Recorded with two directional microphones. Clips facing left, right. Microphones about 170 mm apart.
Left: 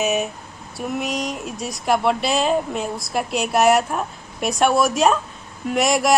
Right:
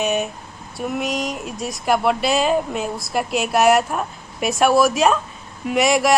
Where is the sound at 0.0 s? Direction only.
5° left (ahead or behind).